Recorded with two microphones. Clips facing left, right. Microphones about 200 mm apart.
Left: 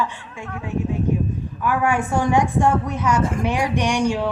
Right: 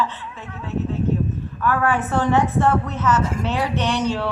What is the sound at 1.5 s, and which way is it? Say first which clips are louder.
A woman's voice: even; 15° left (ahead or behind).